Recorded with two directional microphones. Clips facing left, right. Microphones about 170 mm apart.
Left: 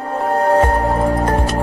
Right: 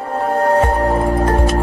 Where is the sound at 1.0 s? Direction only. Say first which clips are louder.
Right 1 dB; centre (ahead or behind).